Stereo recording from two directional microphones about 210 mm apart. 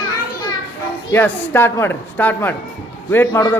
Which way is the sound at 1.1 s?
10° left (ahead or behind).